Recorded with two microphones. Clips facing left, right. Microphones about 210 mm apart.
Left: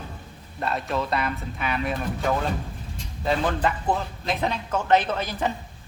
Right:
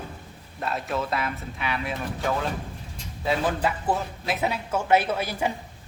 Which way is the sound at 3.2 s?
5° right (ahead or behind).